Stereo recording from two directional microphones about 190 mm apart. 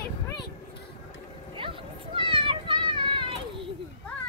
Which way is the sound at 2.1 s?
25° right (ahead or behind).